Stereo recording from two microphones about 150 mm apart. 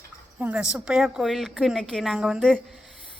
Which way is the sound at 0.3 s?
5° right (ahead or behind).